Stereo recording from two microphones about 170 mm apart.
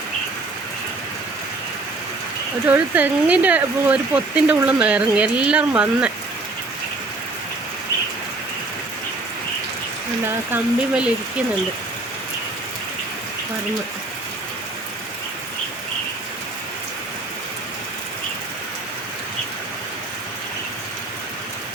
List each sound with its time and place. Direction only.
2.6 s speech: 10° right (ahead or behind)
10.2 s speech: 10° right (ahead or behind)